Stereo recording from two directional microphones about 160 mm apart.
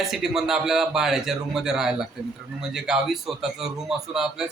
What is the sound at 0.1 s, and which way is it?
A man's voice, centre (ahead or behind).